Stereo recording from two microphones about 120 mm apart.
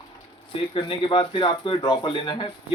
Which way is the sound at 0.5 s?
50° left (ahead or behind).